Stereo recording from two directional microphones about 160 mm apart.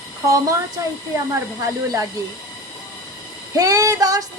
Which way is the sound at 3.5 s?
20° right (ahead or behind).